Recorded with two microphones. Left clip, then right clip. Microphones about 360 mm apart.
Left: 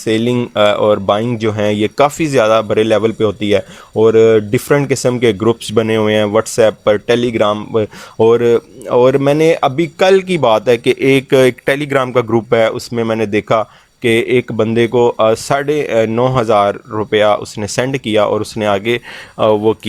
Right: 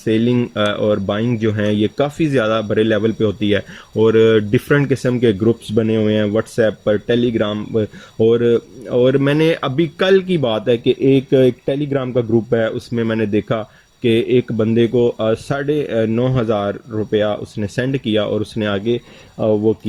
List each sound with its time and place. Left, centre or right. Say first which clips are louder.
0.0 s speech: left 2 dB; centre
18.9 s speech: left 4 dB; left